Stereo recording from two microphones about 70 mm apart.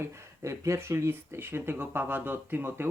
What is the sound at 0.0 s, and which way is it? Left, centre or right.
Speech, right.